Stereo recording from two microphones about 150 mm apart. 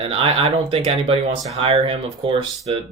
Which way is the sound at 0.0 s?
40° right (ahead or behind).